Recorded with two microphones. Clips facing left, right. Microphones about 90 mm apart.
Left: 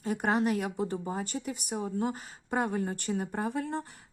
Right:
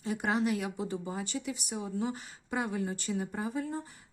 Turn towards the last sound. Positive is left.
turn(degrees=65)  # may be behind; listen again after turning